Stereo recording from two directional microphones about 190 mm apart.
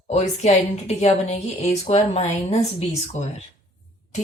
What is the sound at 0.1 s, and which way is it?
A woman's voice, 35° left (ahead or behind).